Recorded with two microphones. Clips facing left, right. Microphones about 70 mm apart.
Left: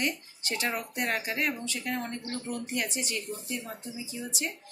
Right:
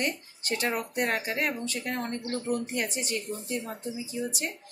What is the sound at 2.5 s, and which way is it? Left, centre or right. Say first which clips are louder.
Speech: right 2 dB; right.